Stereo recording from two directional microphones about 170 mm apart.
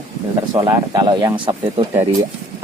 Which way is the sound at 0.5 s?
25° right (ahead or behind).